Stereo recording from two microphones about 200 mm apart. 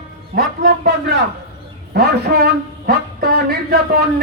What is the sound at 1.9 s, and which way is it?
A man's voice, 50° right (ahead or behind).